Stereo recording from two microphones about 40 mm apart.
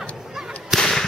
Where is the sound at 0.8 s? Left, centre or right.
Centre.